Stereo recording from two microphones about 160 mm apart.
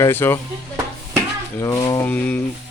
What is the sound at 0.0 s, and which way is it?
Speech, 15° left (ahead or behind).